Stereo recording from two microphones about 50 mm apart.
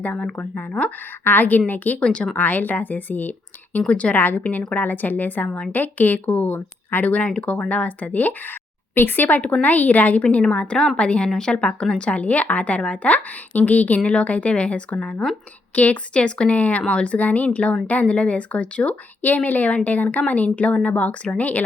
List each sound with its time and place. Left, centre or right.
0.3 s a woman's voice: left
1.2 s speech: left
2.0 s a woman's voice: centre
2.3 s speech: left
3.8 s a woman's voice: left
4.1 s speech: left
9.4 s speech: left
10.2 s a woman's voice: left